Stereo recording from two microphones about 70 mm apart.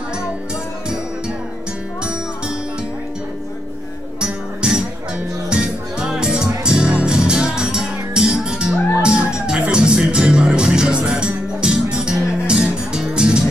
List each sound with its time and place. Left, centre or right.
4.2 s music: centre